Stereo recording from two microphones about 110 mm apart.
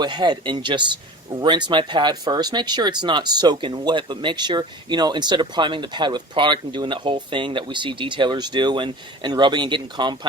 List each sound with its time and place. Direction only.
0.0 s speech: 40° right (ahead or behind)